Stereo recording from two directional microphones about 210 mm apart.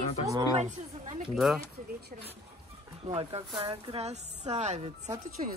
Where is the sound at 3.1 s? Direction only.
30° right (ahead or behind).